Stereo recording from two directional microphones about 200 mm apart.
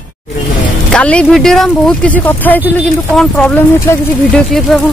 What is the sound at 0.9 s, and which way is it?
Speech, 5° left (ahead or behind).